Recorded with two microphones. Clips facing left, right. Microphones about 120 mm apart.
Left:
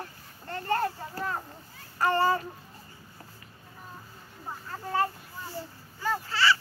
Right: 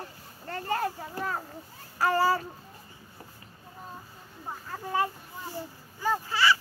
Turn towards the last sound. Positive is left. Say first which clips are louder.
# right 1 dB
turn(degrees=-15)  # may be behind; listen again after turning